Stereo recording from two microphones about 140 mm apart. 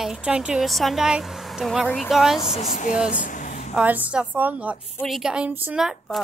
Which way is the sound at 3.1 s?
70° left (ahead or behind).